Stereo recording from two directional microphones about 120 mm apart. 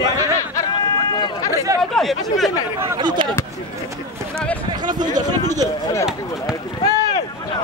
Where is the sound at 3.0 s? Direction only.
40° right (ahead or behind).